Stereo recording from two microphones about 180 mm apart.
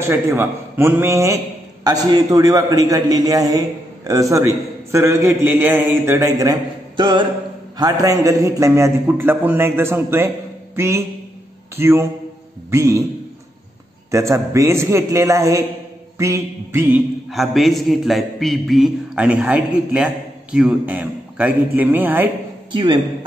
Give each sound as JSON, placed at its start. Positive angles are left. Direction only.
{"t": 0.0, "sound": "a man's voice", "side_deg": -15}
{"t": 14.1, "sound": "a man's voice", "side_deg": -15}
{"t": 17.3, "sound": "a man's voice", "side_deg": 0}
{"t": 22.7, "sound": "a man's voice", "side_deg": -25}